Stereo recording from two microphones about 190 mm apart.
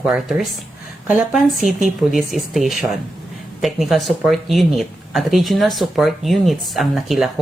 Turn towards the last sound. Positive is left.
turn(degrees=0)  # may be behind; listen again after turning